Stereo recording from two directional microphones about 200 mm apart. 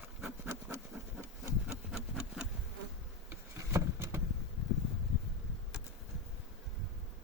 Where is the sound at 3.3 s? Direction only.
15° right (ahead or behind).